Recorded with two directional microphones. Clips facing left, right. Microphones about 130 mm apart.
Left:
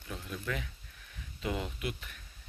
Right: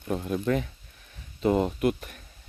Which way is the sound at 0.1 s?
50° right (ahead or behind).